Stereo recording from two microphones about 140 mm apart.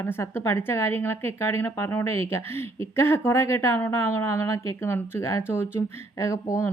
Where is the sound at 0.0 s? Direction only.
15° left (ahead or behind).